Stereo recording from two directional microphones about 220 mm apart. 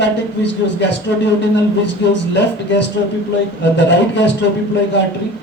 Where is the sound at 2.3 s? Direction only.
55° left (ahead or behind).